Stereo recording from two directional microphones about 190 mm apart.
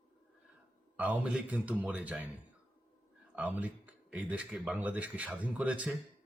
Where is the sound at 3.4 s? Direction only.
5° right (ahead or behind).